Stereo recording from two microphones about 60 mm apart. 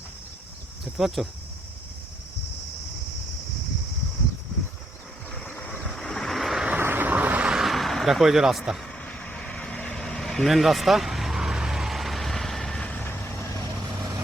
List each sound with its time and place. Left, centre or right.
0.9 s speech: centre
5.8 s vehicle: centre
6.7 s vehicle: right
7.4 s vehicle: centre
9.0 s vehicle: centre
13.1 s vehicle: left